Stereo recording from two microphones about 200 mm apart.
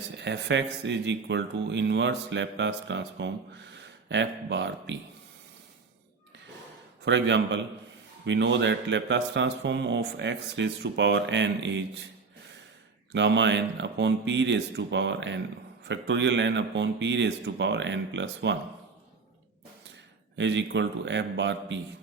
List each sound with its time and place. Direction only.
0.2 s a man's voice: 60° right (ahead or behind)
7.0 s a man's voice: 60° right (ahead or behind)
13.1 s a man's voice: 65° right (ahead or behind)
20.3 s a man's voice: 65° right (ahead or behind)